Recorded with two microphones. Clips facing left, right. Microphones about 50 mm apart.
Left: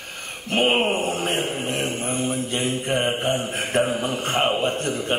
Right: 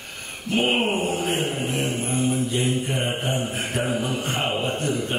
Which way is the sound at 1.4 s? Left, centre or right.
Centre.